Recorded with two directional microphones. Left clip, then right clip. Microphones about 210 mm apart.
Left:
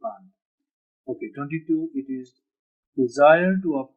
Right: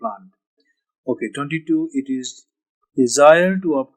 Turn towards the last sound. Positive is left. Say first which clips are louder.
# right 5 dB
turn(degrees=-45)  # may be behind; listen again after turning